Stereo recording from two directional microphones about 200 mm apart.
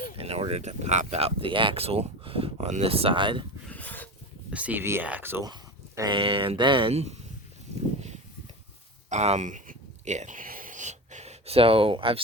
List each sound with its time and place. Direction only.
0.2 s speech: 30° right (ahead or behind)
3.7 s filing: 10° left (ahead or behind)
4.5 s speech: 10° right (ahead or behind)
6.0 s speech: 25° right (ahead or behind)
9.0 s a sound: 35° right (ahead or behind)